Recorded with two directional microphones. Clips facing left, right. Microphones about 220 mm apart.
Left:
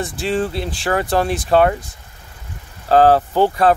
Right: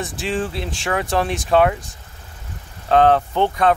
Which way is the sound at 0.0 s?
Centre (ahead or behind).